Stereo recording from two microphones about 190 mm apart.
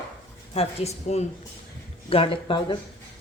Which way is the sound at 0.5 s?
35° left (ahead or behind).